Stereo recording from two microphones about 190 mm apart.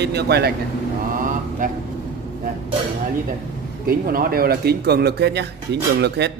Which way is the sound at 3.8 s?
50° right (ahead or behind).